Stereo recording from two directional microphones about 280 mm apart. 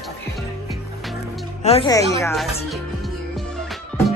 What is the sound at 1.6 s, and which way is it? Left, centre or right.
Speech, centre.